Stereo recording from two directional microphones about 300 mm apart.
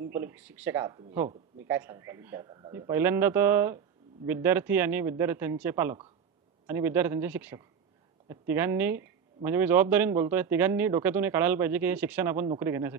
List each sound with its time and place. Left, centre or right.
0.1 s speech: centre